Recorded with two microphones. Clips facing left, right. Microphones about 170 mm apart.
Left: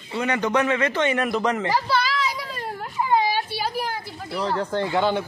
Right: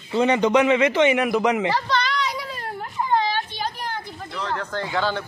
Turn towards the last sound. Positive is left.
turn(degrees=15)  # may be behind; listen again after turning